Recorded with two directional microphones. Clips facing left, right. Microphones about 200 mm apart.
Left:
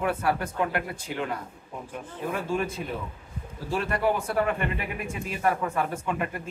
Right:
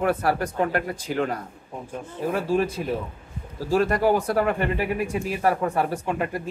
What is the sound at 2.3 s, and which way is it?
Speech, 35° right (ahead or behind).